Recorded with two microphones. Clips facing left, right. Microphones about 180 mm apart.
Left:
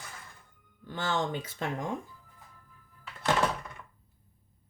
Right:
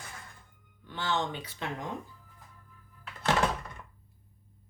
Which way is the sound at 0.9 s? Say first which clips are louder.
Left 1 dB; 45° left (ahead or behind).